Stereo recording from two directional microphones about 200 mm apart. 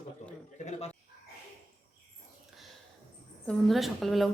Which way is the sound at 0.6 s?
35° left (ahead or behind).